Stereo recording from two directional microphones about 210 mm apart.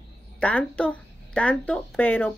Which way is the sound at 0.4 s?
5° left (ahead or behind).